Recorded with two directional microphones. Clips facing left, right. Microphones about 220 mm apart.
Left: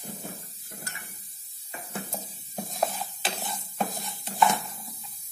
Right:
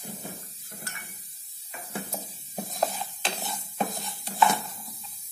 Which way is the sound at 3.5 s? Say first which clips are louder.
Right 1 dB; centre (ahead or behind).